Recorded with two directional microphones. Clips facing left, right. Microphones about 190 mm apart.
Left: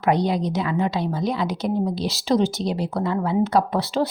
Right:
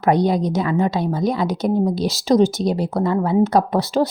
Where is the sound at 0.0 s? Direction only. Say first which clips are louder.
Right 4 dB; 45° right (ahead or behind).